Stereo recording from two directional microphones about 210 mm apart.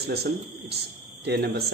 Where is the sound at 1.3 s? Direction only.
50° right (ahead or behind).